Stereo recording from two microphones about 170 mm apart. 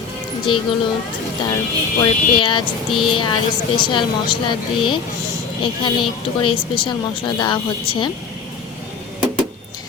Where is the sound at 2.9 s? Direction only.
Centre (ahead or behind).